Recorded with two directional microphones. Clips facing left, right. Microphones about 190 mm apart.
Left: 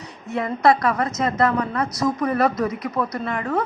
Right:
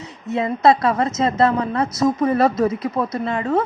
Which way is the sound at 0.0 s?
25° right (ahead or behind).